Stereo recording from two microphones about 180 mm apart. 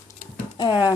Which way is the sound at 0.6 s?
25° left (ahead or behind).